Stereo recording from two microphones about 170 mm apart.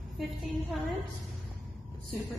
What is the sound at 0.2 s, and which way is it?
Speech, centre (ahead or behind).